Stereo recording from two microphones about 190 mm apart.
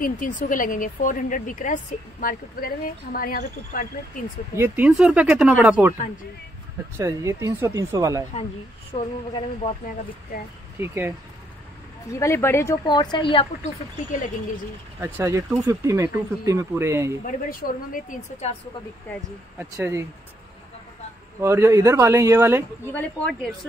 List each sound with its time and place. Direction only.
0.0 s speech: 45° left (ahead or behind)
4.6 s speech: 10° right (ahead or behind)
7.0 s speech: 15° right (ahead or behind)
8.9 s speech: 30° left (ahead or behind)
10.8 s speech: 10° right (ahead or behind)
12.1 s a woman's voice: 15° left (ahead or behind)
15.0 s speech: 10° right (ahead or behind)
17.2 s speech: 50° left (ahead or behind)
18.4 s speech: 35° left (ahead or behind)
19.6 s speech: 10° right (ahead or behind)
21.4 s speech: 15° right (ahead or behind)
22.9 s speech: 5° left (ahead or behind)